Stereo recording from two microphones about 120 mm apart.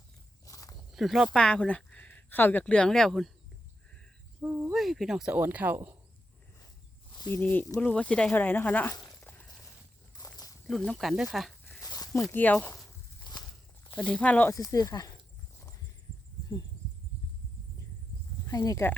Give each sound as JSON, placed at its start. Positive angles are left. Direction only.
{"t": 0.4, "sound": "walk", "side_deg": 30}
{"t": 0.9, "sound": "speech", "side_deg": 0}
{"t": 4.4, "sound": "cricket", "side_deg": -15}
{"t": 4.7, "sound": "speech", "side_deg": 0}
{"t": 7.3, "sound": "speech", "side_deg": 15}
{"t": 10.2, "sound": "walk", "side_deg": 35}
{"t": 10.7, "sound": "speech", "side_deg": 5}
{"t": 11.8, "sound": "a sound", "side_deg": 30}
{"t": 12.3, "sound": "speech", "side_deg": 15}
{"t": 13.3, "sound": "walk", "side_deg": 40}
{"t": 13.9, "sound": "speech", "side_deg": 10}
{"t": 14.5, "sound": "speech", "side_deg": 30}
{"t": 18.4, "sound": "speech", "side_deg": 30}